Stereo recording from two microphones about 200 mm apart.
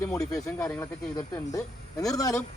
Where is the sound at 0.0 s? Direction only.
5° left (ahead or behind).